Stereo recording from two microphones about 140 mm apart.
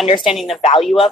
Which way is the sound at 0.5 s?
45° left (ahead or behind).